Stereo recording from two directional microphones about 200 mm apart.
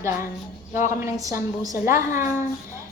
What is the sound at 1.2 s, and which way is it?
Speech, 15° right (ahead or behind).